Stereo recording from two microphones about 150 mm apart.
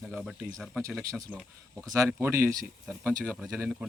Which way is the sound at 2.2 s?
15° right (ahead or behind).